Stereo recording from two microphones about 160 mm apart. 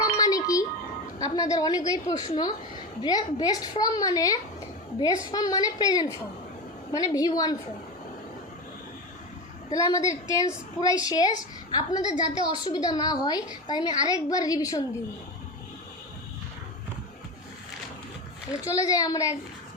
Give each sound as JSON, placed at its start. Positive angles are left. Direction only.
{"t": 0.0, "sound": "music", "side_deg": 25}
{"t": 1.2, "sound": "a woman's voice", "side_deg": 20}
{"t": 9.6, "sound": "a woman's voice", "side_deg": 20}
{"t": 18.6, "sound": "a woman's voice", "side_deg": 20}